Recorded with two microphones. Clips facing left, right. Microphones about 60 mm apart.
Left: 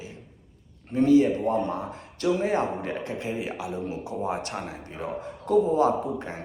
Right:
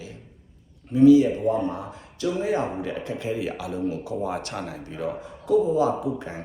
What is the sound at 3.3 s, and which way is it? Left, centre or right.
Speech, left.